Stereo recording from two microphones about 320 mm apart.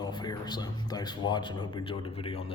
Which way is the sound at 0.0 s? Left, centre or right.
Centre.